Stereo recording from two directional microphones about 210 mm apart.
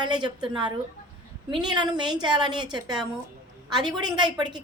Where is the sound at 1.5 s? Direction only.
20° right (ahead or behind).